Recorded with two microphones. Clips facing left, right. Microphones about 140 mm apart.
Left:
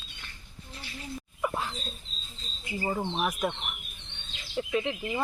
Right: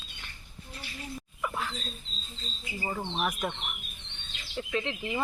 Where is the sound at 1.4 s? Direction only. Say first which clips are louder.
Left 3 dB; 25° left (ahead or behind).